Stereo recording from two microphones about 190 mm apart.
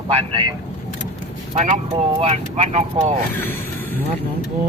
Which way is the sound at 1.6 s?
35° right (ahead or behind).